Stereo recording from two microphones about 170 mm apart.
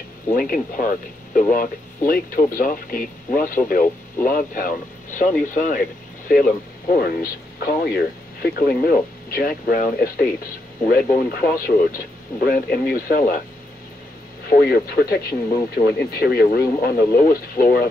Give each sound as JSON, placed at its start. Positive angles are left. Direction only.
{"t": 0.3, "sound": "speech", "side_deg": 55}
{"t": 14.5, "sound": "speech", "side_deg": 65}